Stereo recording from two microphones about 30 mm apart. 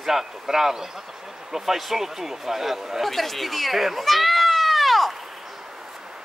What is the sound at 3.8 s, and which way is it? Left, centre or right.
Speech, centre.